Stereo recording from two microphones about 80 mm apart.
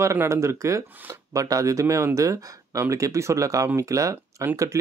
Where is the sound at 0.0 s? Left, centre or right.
Right.